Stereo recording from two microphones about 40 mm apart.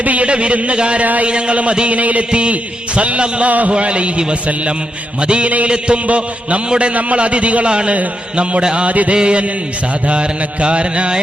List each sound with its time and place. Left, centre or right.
0.0 s a man's voice: right
1.0 s a man's voice: right
1.3 s a man's voice: right